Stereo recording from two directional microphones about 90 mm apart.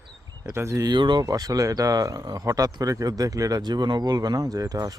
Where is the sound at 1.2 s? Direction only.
40° right (ahead or behind).